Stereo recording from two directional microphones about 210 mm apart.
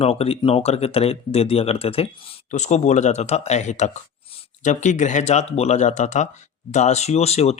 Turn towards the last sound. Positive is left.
turn(degrees=30)  # may be behind; listen again after turning